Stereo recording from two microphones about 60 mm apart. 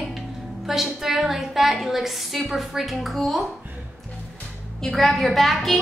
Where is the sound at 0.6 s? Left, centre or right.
Centre.